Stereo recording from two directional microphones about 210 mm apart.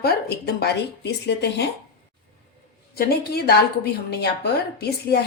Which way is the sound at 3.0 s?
50° left (ahead or behind).